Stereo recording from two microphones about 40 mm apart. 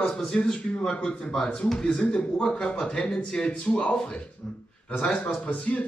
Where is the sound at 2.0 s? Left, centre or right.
Left.